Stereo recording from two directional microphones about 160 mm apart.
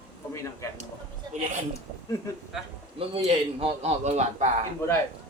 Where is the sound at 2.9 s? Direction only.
35° right (ahead or behind).